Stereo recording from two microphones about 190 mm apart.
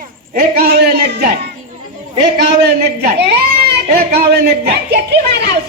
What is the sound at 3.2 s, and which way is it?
A man's voice, 60° right (ahead or behind).